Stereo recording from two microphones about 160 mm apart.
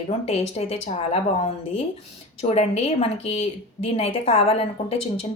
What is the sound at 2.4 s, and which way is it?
Speech, 40° left (ahead or behind).